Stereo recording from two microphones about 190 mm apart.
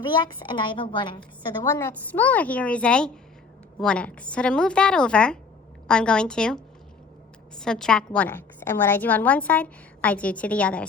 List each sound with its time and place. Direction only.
0.1 s a woman's voice: 25° left (ahead or behind)
1.6 s a woman's voice: 15° left (ahead or behind)